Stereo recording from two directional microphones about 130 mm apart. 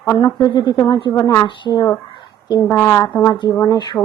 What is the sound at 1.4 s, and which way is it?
Speech, 30° left (ahead or behind).